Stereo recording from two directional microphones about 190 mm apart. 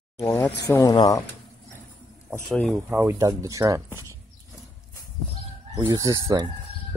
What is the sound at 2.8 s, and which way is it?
Speech, 10° right (ahead or behind).